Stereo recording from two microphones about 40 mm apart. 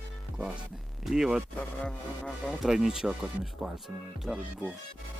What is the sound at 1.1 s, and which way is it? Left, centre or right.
Speech, centre.